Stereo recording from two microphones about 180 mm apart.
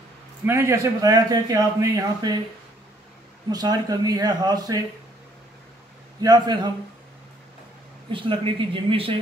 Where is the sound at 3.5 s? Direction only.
20° right (ahead or behind).